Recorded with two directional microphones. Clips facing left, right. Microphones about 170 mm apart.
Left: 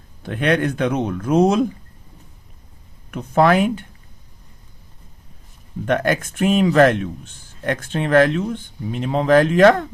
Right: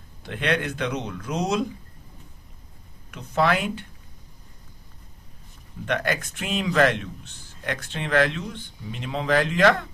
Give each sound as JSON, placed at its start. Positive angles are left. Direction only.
{"t": 0.2, "sound": "a man's voice", "side_deg": 50}
{"t": 3.1, "sound": "a man's voice", "side_deg": 50}
{"t": 5.8, "sound": "a man's voice", "side_deg": 50}